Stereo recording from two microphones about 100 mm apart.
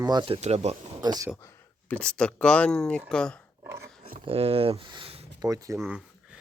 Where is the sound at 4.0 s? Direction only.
75° right (ahead or behind).